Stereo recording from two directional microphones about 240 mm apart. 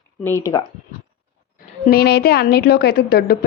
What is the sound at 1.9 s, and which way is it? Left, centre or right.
A woman's voice, left.